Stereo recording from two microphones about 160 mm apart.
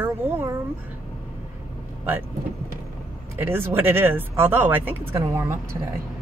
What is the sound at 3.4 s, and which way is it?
Speech, 15° right (ahead or behind).